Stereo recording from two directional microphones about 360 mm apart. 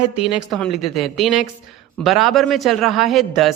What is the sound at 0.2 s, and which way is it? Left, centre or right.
Speech, centre.